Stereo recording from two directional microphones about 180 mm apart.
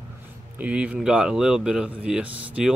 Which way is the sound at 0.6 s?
5° right (ahead or behind).